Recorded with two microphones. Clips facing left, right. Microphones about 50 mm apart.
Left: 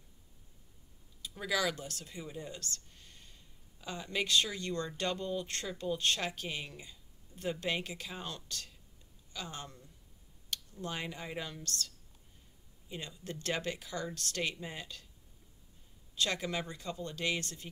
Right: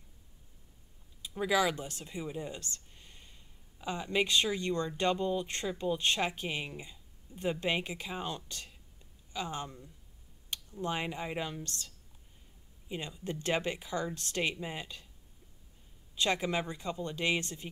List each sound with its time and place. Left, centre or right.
1.2 s speech: centre
16.2 s speech: right